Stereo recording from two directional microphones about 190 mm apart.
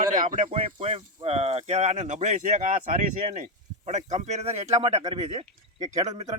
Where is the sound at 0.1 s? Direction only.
45° right (ahead or behind).